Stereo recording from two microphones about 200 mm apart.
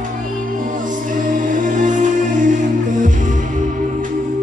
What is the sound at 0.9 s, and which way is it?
Music, 40° right (ahead or behind).